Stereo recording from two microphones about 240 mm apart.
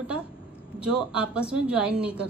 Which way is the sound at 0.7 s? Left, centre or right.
Centre.